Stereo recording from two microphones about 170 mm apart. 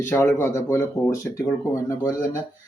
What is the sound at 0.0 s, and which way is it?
Speech, 15° left (ahead or behind).